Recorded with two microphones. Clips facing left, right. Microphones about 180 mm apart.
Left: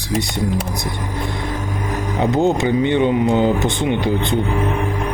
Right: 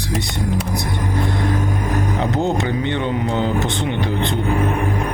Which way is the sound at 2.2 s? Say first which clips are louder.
Left 7 dB; 15° left (ahead or behind).